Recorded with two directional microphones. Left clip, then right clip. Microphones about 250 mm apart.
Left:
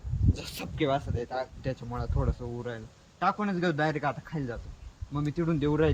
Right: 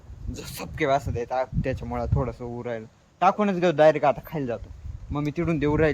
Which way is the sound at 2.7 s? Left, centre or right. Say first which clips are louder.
Right 7 dB; right.